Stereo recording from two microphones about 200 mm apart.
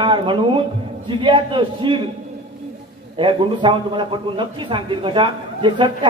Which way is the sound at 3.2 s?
25° right (ahead or behind).